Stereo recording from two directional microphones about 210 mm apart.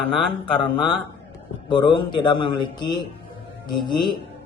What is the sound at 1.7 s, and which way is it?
Speech, 20° left (ahead or behind).